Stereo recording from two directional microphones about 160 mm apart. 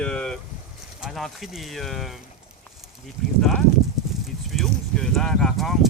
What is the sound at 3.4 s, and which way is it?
Speech, 5° left (ahead or behind).